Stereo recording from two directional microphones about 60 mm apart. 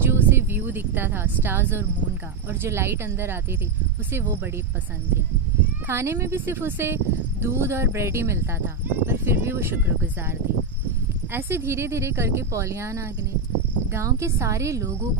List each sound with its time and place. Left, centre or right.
0.0 s a sound: right
2.6 s speech: right
5.9 s speech: right
6.3 s speech: right
11.3 s a woman's voice: right